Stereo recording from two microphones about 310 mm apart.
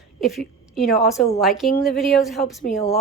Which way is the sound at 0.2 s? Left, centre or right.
Centre.